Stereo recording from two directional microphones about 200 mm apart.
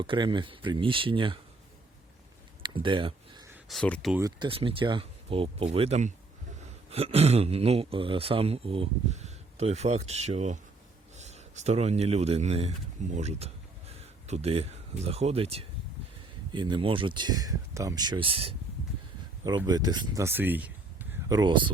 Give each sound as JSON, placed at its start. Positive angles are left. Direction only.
{"t": 0.0, "sound": "speech", "side_deg": -25}
{"t": 2.6, "sound": "a sound", "side_deg": -25}
{"t": 3.7, "sound": "speech", "side_deg": 5}
{"t": 4.2, "sound": "speech", "side_deg": -25}